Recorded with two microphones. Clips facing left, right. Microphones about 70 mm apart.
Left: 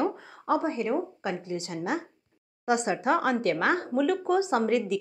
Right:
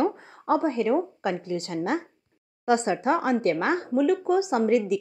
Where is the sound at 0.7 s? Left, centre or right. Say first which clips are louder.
Right 4 dB; right.